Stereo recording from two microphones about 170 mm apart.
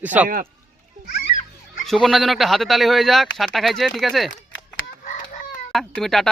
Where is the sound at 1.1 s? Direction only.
50° left (ahead or behind).